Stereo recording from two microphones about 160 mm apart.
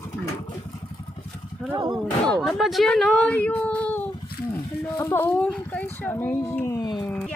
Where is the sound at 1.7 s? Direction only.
25° right (ahead or behind).